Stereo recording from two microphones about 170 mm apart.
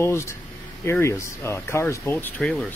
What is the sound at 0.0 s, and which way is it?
Speech, 15° left (ahead or behind).